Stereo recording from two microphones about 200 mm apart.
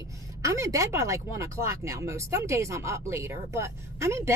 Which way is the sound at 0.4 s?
15° right (ahead or behind).